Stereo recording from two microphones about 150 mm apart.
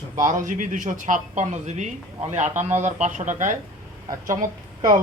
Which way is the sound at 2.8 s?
50° right (ahead or behind).